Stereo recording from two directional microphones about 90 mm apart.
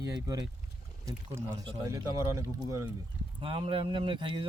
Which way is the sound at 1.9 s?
35° right (ahead or behind).